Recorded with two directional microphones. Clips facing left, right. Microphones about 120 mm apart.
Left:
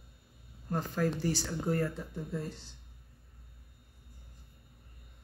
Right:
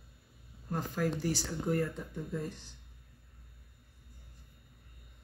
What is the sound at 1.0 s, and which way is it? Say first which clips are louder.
Speech: left 1 dB; 5° right (ahead or behind).